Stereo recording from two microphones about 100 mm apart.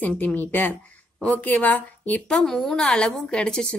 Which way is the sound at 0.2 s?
15° left (ahead or behind).